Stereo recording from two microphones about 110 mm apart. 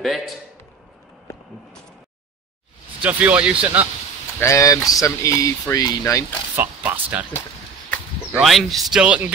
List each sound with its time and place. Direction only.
0.0 s speech: centre (ahead or behind)
3.0 s speech: 15° right (ahead or behind)
4.4 s speech: 30° left (ahead or behind)
6.5 s speech: 15° right (ahead or behind)
8.3 s speech: centre (ahead or behind)
9.0 s speech: 10° right (ahead or behind)